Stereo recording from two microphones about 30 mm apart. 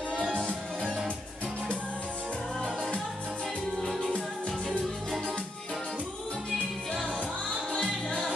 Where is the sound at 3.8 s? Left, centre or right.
Centre.